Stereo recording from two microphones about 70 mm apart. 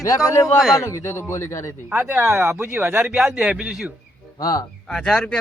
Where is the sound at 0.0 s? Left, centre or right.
Left.